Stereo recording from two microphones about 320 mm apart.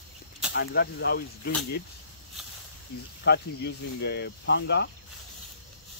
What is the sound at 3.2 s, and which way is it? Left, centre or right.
Speech, left.